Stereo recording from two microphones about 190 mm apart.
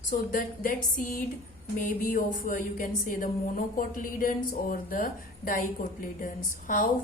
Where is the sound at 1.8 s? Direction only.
45° left (ahead or behind).